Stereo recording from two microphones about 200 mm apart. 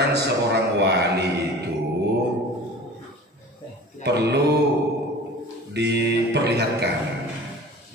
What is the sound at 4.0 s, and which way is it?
Speech, 55° right (ahead or behind).